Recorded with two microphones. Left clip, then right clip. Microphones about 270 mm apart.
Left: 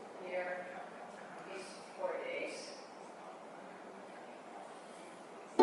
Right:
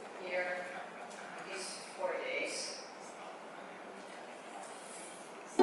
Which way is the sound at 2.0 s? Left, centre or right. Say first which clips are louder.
Right 3 dB; centre.